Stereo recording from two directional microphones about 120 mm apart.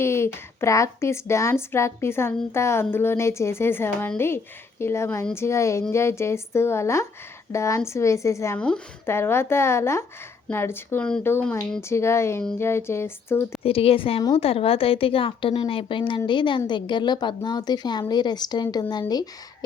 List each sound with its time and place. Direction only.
0.0 s speech: 20° left (ahead or behind)
8.5 s speech: 5° left (ahead or behind)
9.0 s speech: 20° left (ahead or behind)
13.6 s a woman's voice: 50° left (ahead or behind); by 19.3 s 35° left (ahead or behind)